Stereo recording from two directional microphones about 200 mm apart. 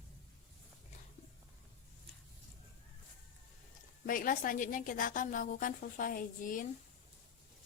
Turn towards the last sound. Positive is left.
turn(degrees=40)  # may be behind; listen again after turning